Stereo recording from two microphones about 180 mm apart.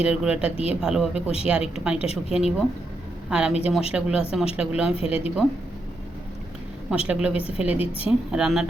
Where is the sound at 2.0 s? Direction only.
35° left (ahead or behind).